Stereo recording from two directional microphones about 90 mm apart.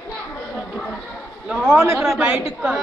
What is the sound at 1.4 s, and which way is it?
A woman's voice, 10° right (ahead or behind).